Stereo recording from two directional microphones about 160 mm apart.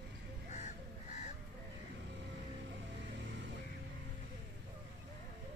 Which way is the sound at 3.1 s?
90° right.